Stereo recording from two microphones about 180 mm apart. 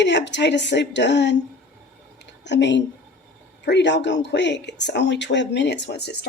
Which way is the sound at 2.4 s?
75° left (ahead or behind).